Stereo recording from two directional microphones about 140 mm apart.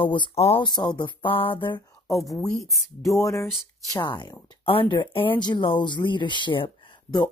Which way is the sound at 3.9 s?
35° left (ahead or behind).